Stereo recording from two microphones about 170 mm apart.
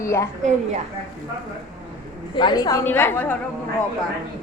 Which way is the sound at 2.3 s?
25° left (ahead or behind).